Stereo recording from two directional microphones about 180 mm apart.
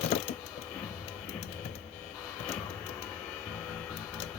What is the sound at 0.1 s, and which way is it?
Mechanisms, 40° left (ahead or behind).